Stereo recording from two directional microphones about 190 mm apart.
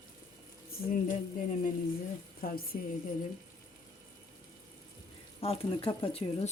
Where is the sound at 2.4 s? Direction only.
50° left (ahead or behind).